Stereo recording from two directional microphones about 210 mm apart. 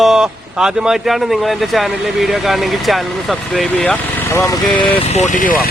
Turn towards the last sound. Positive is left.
turn(degrees=40)  # may be behind; listen again after turning